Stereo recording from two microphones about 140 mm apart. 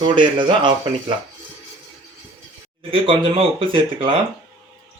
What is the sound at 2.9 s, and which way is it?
Speech, 40° right (ahead or behind).